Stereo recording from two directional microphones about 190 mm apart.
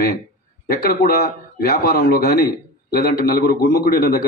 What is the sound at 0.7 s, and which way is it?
A man's voice, 55° left (ahead or behind).